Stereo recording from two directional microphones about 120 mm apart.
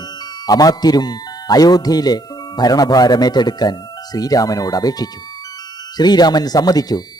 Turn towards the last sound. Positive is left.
turn(degrees=30)  # may be behind; listen again after turning